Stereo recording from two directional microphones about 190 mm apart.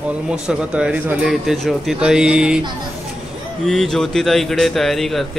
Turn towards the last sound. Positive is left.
turn(degrees=0)  # may be behind; listen again after turning